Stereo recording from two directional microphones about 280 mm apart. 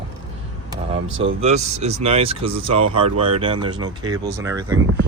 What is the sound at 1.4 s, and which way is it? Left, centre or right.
Speech, right.